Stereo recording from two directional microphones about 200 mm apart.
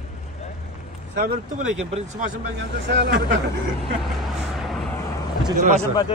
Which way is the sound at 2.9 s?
60° right (ahead or behind).